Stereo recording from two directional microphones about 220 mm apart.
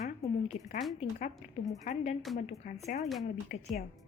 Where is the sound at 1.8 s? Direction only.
30° left (ahead or behind).